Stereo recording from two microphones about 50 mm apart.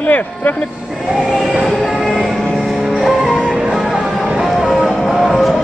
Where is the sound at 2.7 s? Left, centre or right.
Centre.